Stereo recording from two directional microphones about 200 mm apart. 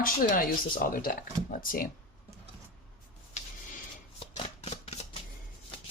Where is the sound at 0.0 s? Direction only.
45° left (ahead or behind).